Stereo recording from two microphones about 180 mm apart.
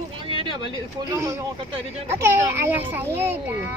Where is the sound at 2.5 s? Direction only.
10° right (ahead or behind).